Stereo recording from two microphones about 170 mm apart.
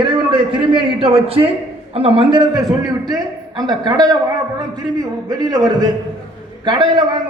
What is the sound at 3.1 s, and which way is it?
Speech, 25° right (ahead or behind).